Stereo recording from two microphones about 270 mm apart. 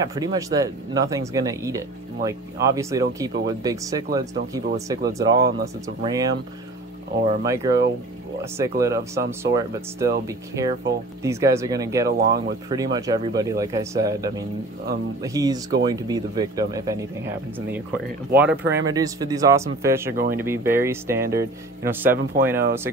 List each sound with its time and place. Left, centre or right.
0.0 s speech: centre
7.4 s speech: centre
12.1 s speech: right
12.6 s speech: centre
18.6 s speech: right
18.9 s speech: centre